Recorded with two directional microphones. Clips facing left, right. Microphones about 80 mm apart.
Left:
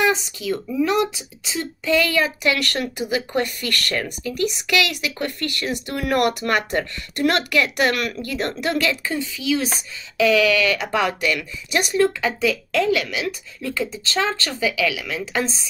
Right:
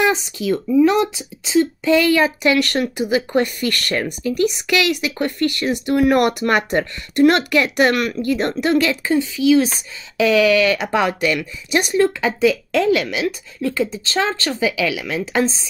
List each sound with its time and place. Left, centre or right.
1.4 s speech: right